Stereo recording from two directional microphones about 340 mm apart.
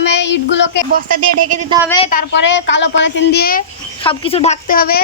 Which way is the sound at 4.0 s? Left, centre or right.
Centre.